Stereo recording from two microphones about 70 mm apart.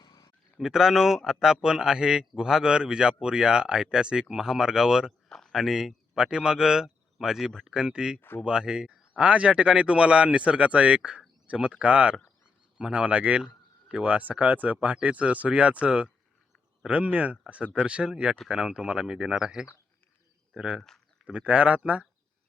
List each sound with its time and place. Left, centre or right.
0.0 s a sound: left
0.6 s a man's voice: centre
5.3 s a man's voice: centre